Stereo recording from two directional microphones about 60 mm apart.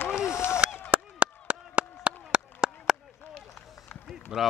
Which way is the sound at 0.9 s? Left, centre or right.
Right.